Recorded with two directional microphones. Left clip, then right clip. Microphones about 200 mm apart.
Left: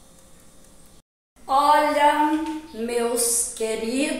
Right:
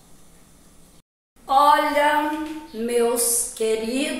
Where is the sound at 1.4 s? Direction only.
5° left (ahead or behind).